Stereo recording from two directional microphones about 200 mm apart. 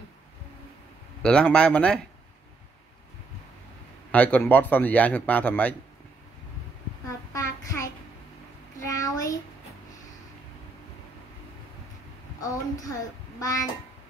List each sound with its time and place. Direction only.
1.2 s speech: 5° left (ahead or behind)
4.1 s speech: 5° left (ahead or behind)
7.3 s child singing: 15° left (ahead or behind)
8.8 s a sound: 15° left (ahead or behind)
12.4 s a child's voice: 15° left (ahead or behind)